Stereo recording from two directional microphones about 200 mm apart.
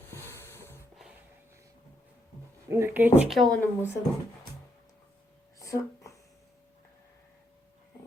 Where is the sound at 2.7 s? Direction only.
10° right (ahead or behind); by 3.9 s 5° left (ahead or behind).